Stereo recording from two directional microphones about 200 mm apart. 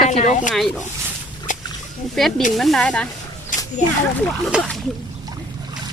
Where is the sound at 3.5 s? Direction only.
40° left (ahead or behind).